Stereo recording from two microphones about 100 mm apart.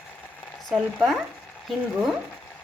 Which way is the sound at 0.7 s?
5° right (ahead or behind).